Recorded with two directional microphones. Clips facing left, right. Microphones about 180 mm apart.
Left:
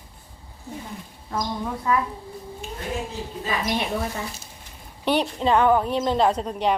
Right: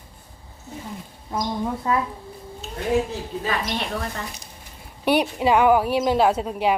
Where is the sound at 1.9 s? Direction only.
25° right (ahead or behind).